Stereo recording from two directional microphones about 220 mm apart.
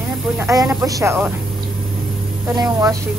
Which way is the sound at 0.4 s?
15° right (ahead or behind).